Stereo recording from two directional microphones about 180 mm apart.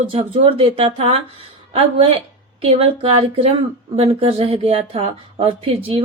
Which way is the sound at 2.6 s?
35° right (ahead or behind).